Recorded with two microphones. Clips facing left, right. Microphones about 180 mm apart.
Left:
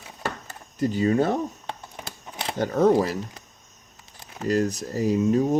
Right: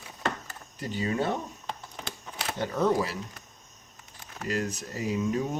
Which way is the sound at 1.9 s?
20° left (ahead or behind).